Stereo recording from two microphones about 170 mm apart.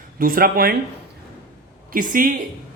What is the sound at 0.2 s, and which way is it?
Speech, 60° right (ahead or behind).